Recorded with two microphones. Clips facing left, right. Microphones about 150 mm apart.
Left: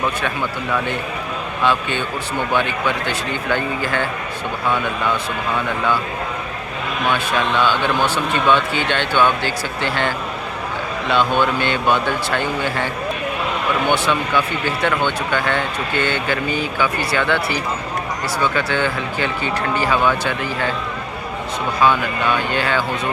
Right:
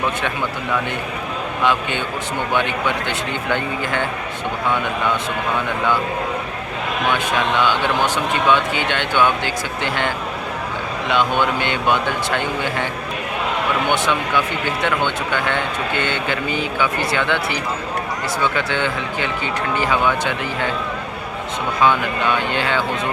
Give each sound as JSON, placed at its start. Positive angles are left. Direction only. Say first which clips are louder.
{"t": 2.6, "sound": "speech", "louder": "even", "side_deg": -20}
{"t": 7.1, "sound": "speech", "louder": "left 1 dB", "side_deg": -15}
{"t": 22.3, "sound": "speech", "louder": "left 1 dB", "side_deg": -25}